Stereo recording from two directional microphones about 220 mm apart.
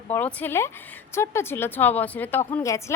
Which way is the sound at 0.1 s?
5° left (ahead or behind).